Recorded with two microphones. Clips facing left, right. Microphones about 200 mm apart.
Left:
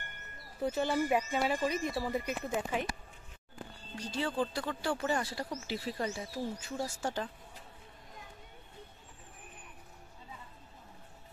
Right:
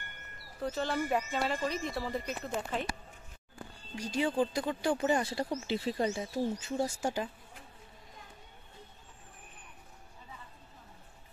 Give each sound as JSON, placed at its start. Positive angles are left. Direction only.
{"t": 0.6, "sound": "speech", "side_deg": 15}
{"t": 3.9, "sound": "speech", "side_deg": -15}
{"t": 7.0, "sound": "speech", "side_deg": -10}